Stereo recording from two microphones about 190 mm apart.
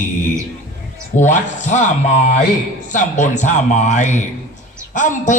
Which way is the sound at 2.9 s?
40° left (ahead or behind).